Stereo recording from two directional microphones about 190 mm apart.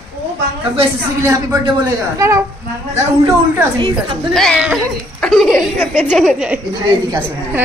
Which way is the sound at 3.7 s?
25° right (ahead or behind).